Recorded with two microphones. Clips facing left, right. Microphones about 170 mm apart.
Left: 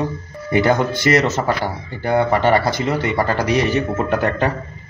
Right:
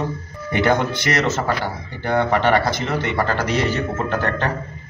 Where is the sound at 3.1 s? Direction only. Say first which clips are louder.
Left 3 dB; 15° left (ahead or behind).